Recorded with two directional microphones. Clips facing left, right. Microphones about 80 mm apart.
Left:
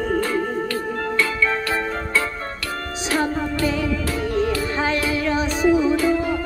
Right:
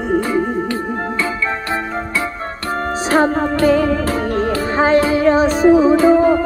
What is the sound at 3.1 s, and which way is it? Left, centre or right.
Music, right.